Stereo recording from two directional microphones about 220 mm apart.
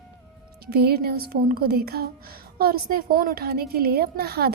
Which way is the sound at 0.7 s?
45° right (ahead or behind).